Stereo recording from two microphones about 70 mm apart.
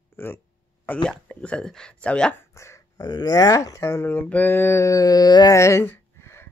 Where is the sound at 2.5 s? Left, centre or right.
Left.